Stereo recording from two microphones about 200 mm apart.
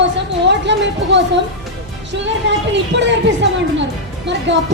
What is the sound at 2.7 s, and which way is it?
Speech, 60° right (ahead or behind).